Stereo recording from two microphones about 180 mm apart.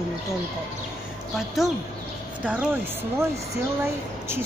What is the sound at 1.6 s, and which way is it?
A woman's voice, centre (ahead or behind).